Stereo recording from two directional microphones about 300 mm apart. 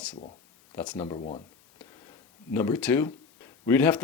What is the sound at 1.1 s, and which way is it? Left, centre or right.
Speech, centre.